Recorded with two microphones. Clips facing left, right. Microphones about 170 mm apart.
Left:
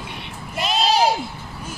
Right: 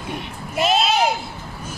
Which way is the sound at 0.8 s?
35° left (ahead or behind).